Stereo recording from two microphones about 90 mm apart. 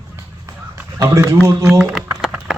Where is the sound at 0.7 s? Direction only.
30° right (ahead or behind).